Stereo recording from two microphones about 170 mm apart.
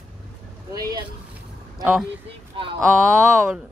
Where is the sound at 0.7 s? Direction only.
25° right (ahead or behind).